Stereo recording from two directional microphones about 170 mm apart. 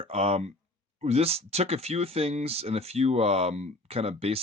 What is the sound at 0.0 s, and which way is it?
Speech, 35° right (ahead or behind).